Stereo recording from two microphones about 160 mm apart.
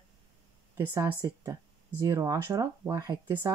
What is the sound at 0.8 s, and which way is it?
Speech, 15° right (ahead or behind).